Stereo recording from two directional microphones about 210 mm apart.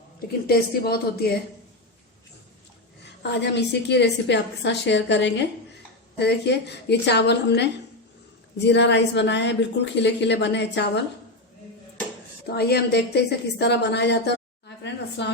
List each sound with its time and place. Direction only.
0.4 s speech: 45° left (ahead or behind)
3.0 s a woman's voice: 55° left (ahead or behind)
12.5 s a woman's voice: 50° left (ahead or behind)